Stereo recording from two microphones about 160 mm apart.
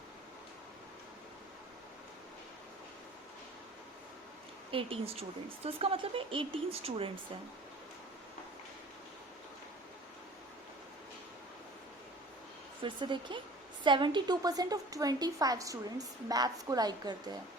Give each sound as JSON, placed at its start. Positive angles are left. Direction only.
{"t": 4.7, "sound": "speech", "side_deg": -35}
{"t": 12.8, "sound": "a woman's voice", "side_deg": -30}